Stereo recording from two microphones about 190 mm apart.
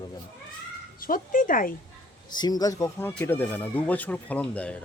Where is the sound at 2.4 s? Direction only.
20° left (ahead or behind).